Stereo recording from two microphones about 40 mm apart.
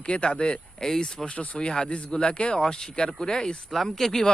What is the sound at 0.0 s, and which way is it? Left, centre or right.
Speech, left.